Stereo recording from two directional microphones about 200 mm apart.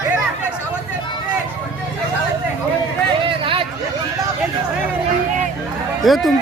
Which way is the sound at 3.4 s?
25° right (ahead or behind).